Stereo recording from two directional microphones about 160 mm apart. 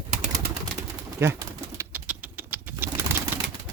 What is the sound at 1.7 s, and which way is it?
Pigeon, 10° right (ahead or behind).